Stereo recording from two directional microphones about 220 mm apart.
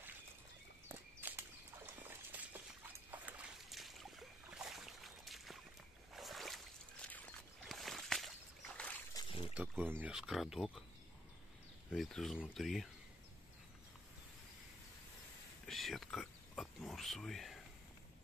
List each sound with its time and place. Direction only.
0.8 s walk: 10° right (ahead or behind)
2.0 s rodents: 10° right (ahead or behind)
3.1 s boat: 5° right (ahead or behind)
9.1 s a sound: 20° left (ahead or behind)
9.5 s speech: 10° right (ahead or behind)
11.9 s speech: centre (ahead or behind)
15.6 s oink: centre (ahead or behind)